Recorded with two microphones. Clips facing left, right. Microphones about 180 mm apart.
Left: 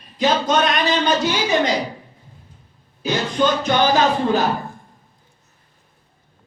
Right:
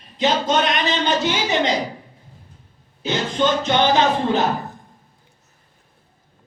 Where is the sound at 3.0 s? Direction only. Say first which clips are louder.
Left 1 dB; 20° right (ahead or behind).